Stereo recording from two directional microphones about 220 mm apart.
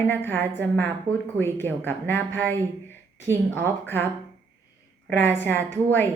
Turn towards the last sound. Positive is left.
turn(degrees=10)  # may be behind; listen again after turning